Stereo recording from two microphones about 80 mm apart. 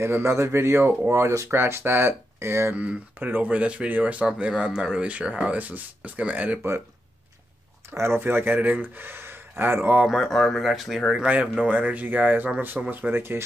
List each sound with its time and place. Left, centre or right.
0.0 s speech: right
2.8 s speech: right
7.9 s speech: right
10.0 s speech: centre
11.5 s speech: centre